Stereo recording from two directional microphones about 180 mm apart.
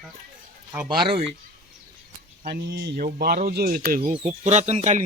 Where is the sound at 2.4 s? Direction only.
60° right (ahead or behind).